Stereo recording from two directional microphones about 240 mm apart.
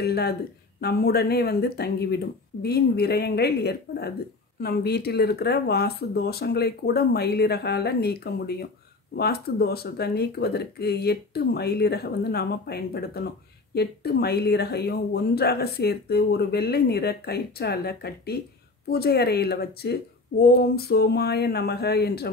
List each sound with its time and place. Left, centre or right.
0.0 s speech: left